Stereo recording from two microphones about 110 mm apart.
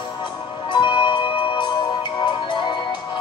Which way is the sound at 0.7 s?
45° left (ahead or behind).